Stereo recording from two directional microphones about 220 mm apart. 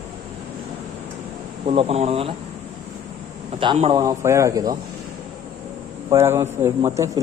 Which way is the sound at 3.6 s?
25° right (ahead or behind).